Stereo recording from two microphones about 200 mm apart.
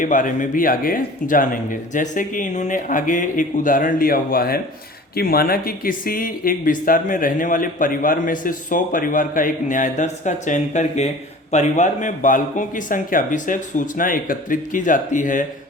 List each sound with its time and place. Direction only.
0.0 s speech: 40° left (ahead or behind)